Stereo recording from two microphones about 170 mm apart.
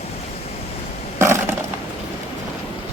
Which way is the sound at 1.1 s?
15° right (ahead or behind).